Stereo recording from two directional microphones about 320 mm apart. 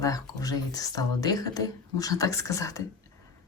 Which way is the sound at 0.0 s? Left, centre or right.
Centre.